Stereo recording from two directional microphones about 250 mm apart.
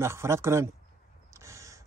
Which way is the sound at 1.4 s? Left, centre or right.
Centre.